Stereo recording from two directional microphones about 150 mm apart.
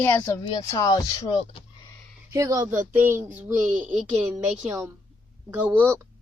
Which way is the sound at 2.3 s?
20° right (ahead or behind).